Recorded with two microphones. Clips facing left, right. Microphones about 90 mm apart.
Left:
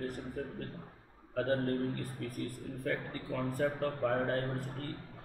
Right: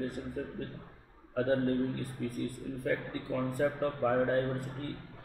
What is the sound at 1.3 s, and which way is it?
A man's voice, 5° right (ahead or behind).